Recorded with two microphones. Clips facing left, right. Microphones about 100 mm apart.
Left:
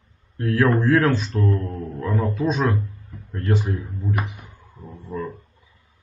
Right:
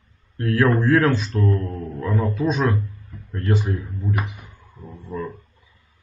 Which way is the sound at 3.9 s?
15° left (ahead or behind).